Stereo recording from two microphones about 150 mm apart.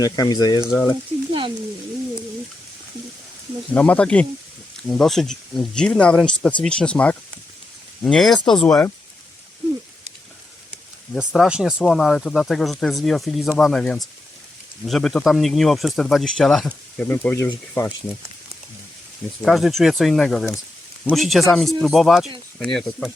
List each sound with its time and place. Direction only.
0.0 s speech: 25° left (ahead or behind)
1.3 s frying: 35° right (ahead or behind)
3.8 s speech: 10° left (ahead or behind)
11.1 s speech: centre (ahead or behind)
19.4 s speech: centre (ahead or behind)